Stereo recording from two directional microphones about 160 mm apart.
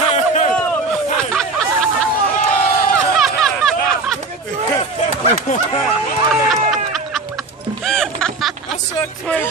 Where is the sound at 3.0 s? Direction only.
Centre (ahead or behind).